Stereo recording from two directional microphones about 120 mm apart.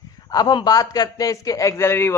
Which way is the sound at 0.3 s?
35° left (ahead or behind).